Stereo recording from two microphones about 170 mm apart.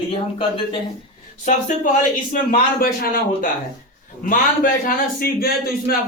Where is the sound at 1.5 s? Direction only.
50° left (ahead or behind).